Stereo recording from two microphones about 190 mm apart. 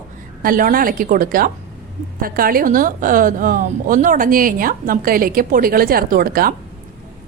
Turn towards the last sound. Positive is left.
turn(degrees=-50)  # may be behind; listen again after turning